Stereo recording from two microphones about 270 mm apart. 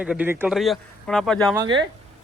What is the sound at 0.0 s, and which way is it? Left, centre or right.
Speech, centre.